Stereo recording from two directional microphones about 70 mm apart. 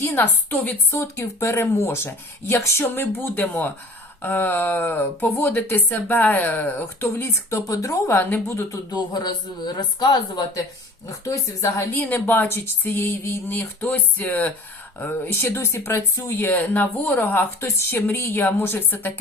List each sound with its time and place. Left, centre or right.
0.0 s speech: left
0.5 s speech: left
0.9 s speech: left
7.0 s speech: left
8.1 s speech: left
8.9 s speech: left
11.3 s speech: left
16.5 s speech: left